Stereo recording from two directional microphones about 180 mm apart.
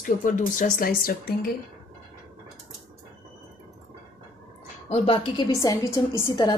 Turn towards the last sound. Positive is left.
turn(degrees=20)  # may be behind; listen again after turning